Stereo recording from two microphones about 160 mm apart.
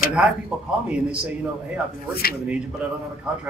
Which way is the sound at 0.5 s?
Centre (ahead or behind).